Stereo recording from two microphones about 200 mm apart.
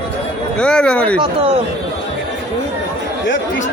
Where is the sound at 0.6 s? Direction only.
5° left (ahead or behind).